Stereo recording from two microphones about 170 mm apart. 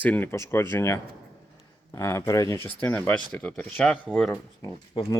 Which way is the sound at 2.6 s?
10° left (ahead or behind).